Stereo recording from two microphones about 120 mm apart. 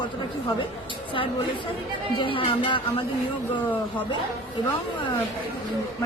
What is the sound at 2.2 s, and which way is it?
Speech, 45° left (ahead or behind).